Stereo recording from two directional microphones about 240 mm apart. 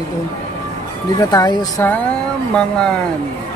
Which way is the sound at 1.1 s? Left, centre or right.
Centre.